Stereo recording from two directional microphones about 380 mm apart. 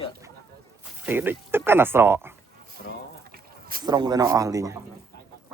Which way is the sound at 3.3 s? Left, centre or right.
Right.